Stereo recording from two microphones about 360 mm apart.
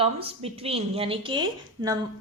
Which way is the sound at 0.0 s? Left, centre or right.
Centre.